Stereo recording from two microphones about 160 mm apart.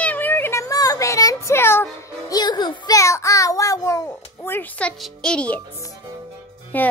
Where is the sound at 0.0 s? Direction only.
10° left (ahead or behind).